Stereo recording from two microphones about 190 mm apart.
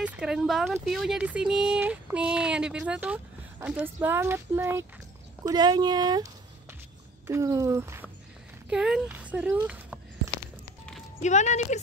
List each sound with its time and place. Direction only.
0.0 s speech: 5° right (ahead or behind)
9.7 s a sound: 5° right (ahead or behind)
11.2 s speech: 40° left (ahead or behind)